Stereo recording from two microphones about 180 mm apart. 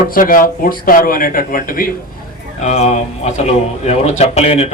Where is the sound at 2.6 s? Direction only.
40° left (ahead or behind).